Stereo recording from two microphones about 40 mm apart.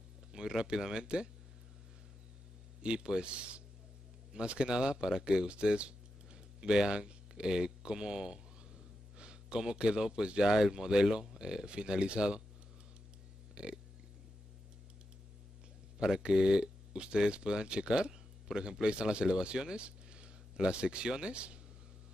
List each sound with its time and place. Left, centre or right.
0.3 s speech: centre
2.8 s a man's voice: right
13.6 s burping: right
16.0 s a man's voice: centre